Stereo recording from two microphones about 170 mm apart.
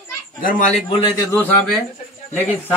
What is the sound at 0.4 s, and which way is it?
Speech, 50° left (ahead or behind).